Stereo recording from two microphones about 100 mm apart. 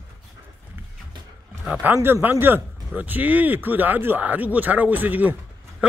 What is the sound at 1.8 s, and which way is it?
Speech, 20° right (ahead or behind).